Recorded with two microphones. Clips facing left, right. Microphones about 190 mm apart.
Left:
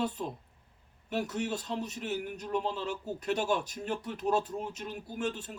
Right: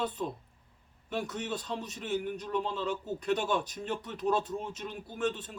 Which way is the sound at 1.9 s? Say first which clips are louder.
Right 2 dB; 10° left (ahead or behind).